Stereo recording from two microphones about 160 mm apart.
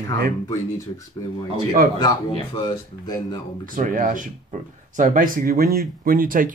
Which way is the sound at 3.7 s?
55° right (ahead or behind).